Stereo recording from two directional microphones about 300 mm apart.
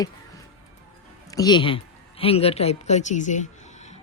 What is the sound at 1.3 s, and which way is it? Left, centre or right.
A woman's voice, centre.